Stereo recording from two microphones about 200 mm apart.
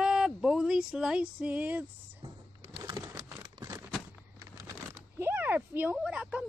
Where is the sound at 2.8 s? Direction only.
15° right (ahead or behind).